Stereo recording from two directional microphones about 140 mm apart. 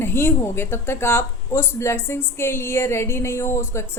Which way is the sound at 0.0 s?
15° left (ahead or behind).